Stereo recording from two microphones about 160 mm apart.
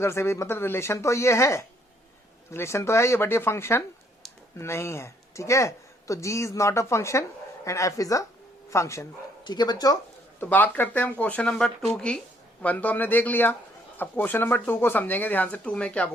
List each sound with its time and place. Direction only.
0.0 s speech: 15° left (ahead or behind)
10.4 s speech: 10° left (ahead or behind)